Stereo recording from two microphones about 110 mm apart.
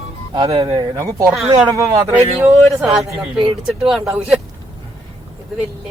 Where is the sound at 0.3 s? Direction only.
40° right (ahead or behind).